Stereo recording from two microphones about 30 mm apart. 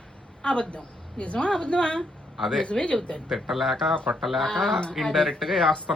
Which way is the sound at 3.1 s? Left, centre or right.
Left.